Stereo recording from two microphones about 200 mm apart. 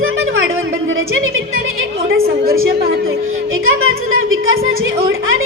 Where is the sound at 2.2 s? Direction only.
50° right (ahead or behind).